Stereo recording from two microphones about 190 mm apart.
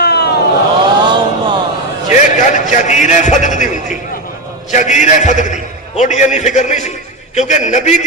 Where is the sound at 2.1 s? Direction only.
40° left (ahead or behind).